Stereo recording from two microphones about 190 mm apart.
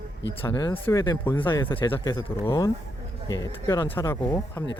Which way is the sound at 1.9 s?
10° left (ahead or behind).